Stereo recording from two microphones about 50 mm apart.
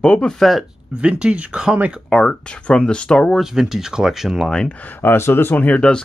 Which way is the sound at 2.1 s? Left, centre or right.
Centre.